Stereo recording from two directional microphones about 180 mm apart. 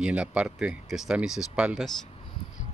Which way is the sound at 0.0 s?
5° right (ahead or behind).